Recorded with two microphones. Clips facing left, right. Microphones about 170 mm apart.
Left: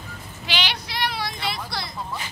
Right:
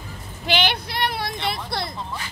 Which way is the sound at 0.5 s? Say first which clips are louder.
Right 6 dB; 55° right (ahead or behind).